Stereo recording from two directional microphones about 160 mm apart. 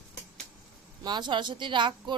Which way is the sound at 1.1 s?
30° right (ahead or behind).